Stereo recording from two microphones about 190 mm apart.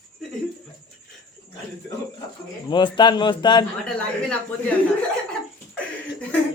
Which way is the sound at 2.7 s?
25° left (ahead or behind).